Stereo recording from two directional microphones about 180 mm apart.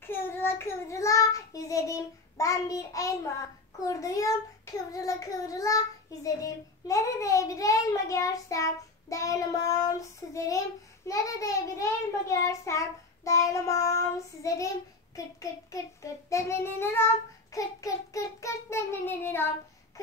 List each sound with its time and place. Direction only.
0.0 s child singing: 10° left (ahead or behind)
15.7 s child singing: 15° left (ahead or behind)